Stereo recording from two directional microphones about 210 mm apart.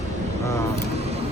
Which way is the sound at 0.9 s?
30° right (ahead or behind).